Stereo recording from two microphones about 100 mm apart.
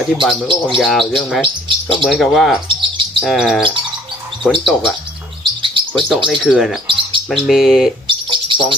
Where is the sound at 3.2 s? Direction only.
5° right (ahead or behind).